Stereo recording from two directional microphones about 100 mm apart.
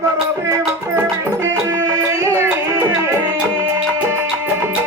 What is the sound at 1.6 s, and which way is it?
Music, 35° right (ahead or behind).